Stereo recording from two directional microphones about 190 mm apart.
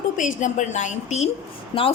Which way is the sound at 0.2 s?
40° left (ahead or behind).